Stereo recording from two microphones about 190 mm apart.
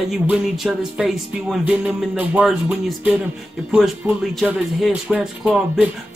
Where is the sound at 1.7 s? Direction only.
5° right (ahead or behind).